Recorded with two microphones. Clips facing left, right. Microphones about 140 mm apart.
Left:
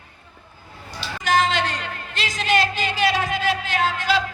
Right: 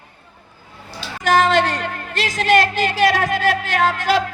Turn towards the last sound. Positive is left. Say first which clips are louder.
# right 4 dB
turn(degrees=-50)  # may be behind; listen again after turning